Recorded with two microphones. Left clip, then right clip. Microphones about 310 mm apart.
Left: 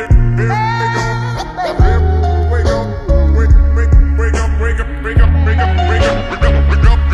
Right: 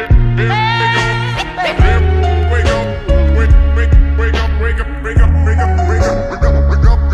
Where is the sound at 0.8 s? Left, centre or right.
Right.